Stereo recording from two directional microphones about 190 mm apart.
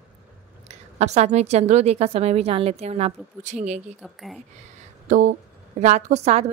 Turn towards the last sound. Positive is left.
turn(degrees=-35)  # may be behind; listen again after turning